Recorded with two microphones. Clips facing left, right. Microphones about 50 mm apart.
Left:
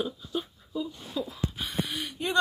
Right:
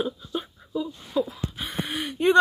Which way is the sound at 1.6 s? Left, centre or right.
Right.